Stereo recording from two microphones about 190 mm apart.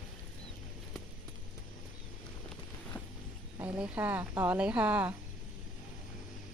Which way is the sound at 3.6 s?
5° right (ahead or behind).